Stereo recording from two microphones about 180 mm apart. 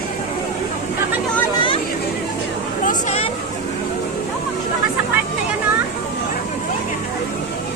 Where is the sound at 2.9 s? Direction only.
40° left (ahead or behind).